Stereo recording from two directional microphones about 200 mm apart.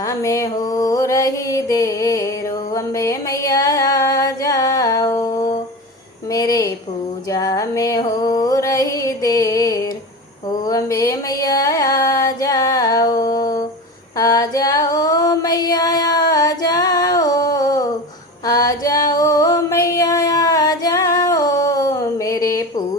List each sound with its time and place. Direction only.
0.0 s mantra: 15° left (ahead or behind)
2.7 s music: 15° left (ahead or behind)
6.3 s a sound: 15° left (ahead or behind)
7.3 s music: 15° left (ahead or behind)
14.2 s female singing: 15° left (ahead or behind)
18.4 s music: 20° left (ahead or behind)